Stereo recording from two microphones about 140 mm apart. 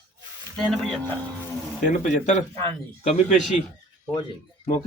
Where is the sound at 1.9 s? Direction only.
55° left (ahead or behind).